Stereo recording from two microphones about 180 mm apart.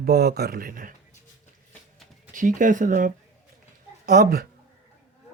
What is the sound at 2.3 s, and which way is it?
Speech, 45° right (ahead or behind).